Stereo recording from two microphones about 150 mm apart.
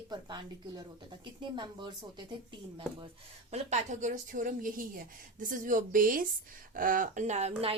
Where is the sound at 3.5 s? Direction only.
50° right (ahead or behind).